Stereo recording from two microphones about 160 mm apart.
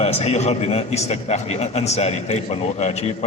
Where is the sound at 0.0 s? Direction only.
40° left (ahead or behind).